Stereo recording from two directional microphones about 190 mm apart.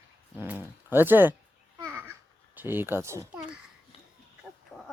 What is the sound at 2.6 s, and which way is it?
Speech, 10° right (ahead or behind).